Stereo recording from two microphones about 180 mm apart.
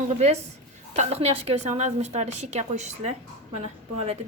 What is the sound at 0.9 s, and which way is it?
A woman's voice, 35° right (ahead or behind).